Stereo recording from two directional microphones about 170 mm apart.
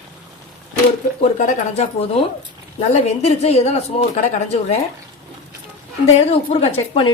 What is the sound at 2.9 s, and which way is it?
Speech, 40° left (ahead or behind).